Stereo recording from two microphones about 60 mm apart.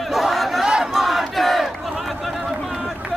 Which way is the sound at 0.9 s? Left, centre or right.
Centre.